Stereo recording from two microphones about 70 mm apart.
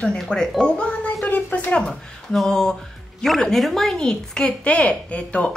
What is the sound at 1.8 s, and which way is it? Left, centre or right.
Speech, centre.